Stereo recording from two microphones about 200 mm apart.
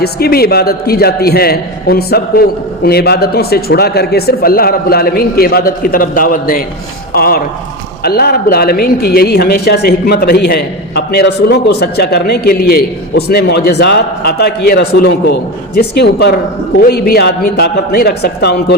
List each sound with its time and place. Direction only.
0.0 s speech: 50° left (ahead or behind)